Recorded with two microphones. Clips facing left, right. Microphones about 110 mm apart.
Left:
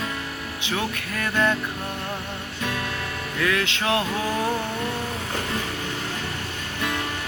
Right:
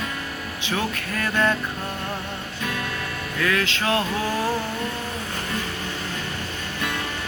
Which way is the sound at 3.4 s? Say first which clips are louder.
Right 1 dB; 20° left (ahead or behind).